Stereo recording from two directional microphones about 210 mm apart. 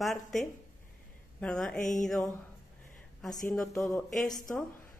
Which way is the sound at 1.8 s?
35° left (ahead or behind).